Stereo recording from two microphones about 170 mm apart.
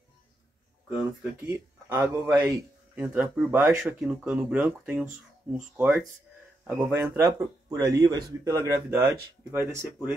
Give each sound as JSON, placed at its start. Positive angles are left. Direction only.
{"t": 0.8, "sound": "speech", "side_deg": -10}